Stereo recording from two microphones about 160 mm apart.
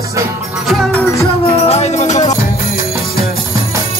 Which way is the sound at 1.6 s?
40° left (ahead or behind).